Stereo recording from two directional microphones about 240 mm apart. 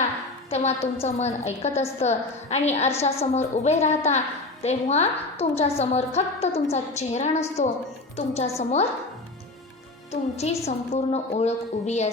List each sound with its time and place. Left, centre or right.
0.5 s a woman's voice: left
10.1 s a woman's voice: left